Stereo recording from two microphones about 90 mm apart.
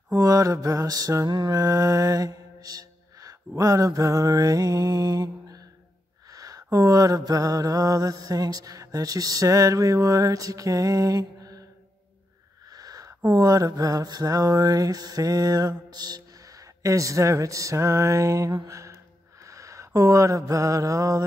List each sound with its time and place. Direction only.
0.1 s mantra: 40° right (ahead or behind)
12.6 s mantra: 45° right (ahead or behind)
15.9 s speech: 50° right (ahead or behind)
18.7 s a sound: 35° right (ahead or behind)
19.4 s mantra: 35° right (ahead or behind)